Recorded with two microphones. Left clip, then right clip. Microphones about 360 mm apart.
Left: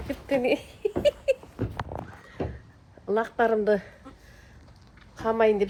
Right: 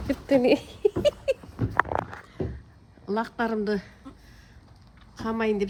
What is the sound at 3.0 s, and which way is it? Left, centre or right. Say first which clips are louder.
Speech: left 4 dB; centre.